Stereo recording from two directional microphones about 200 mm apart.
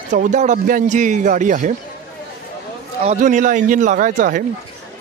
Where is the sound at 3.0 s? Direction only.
35° right (ahead or behind).